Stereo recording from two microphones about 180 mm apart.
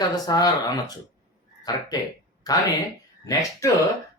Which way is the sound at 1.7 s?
20° left (ahead or behind).